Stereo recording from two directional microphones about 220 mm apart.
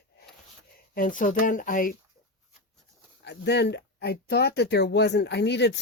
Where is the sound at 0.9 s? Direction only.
35° left (ahead or behind).